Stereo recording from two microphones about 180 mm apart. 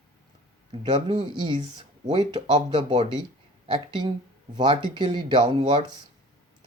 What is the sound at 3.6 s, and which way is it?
Speech, 30° right (ahead or behind).